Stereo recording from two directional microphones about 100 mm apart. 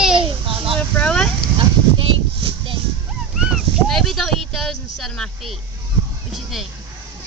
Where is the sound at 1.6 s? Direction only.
60° right (ahead or behind).